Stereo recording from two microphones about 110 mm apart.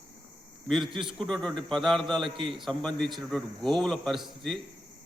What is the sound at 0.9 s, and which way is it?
Speech, 50° right (ahead or behind).